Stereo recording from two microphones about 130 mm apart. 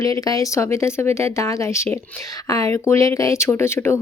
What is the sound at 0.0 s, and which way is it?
Speech, 25° left (ahead or behind).